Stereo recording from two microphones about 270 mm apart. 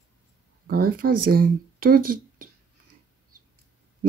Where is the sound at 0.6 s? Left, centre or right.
Right.